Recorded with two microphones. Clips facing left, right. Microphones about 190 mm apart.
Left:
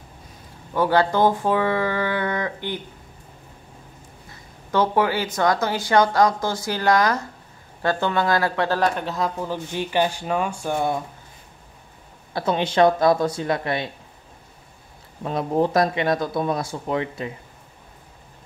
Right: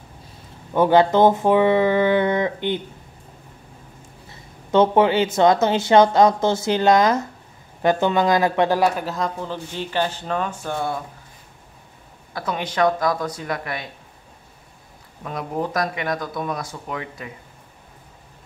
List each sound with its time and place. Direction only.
0.7 s speech: 20° right (ahead or behind)
4.6 s speech: 25° right (ahead or behind); by 11.0 s 15° left (ahead or behind)
12.4 s speech: 25° left (ahead or behind)
15.2 s speech: 30° left (ahead or behind)